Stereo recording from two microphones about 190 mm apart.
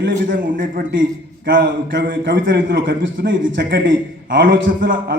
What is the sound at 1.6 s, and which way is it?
A man's voice, 60° right (ahead or behind).